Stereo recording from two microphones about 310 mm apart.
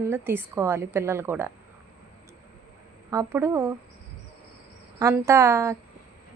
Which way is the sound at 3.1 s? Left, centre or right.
Centre.